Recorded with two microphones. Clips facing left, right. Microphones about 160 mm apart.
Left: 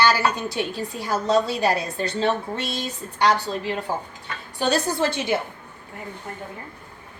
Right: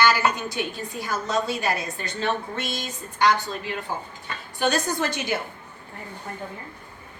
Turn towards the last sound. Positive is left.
turn(degrees=25)  # may be behind; listen again after turning